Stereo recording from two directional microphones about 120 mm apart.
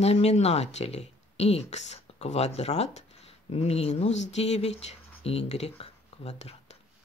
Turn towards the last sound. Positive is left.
turn(degrees=65)  # may be behind; listen again after turning